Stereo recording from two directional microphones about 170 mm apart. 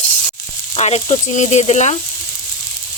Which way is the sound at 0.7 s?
40° left (ahead or behind).